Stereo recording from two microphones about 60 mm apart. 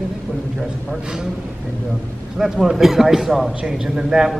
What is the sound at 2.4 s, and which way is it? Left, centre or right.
A man's voice, centre.